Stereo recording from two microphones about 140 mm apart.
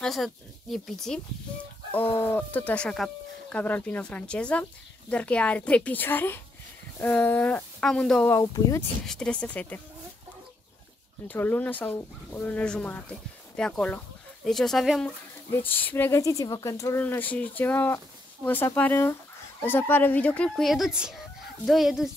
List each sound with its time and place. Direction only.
0.0 s speech: centre (ahead or behind)
2.0 s speech: 15° left (ahead or behind)
8.4 s speech: 25° left (ahead or behind)
9.0 s speech: 5° left (ahead or behind)
11.2 s speech: 15° left (ahead or behind)
15.0 s speech: 15° left (ahead or behind)
17.0 s speech: 10° left (ahead or behind)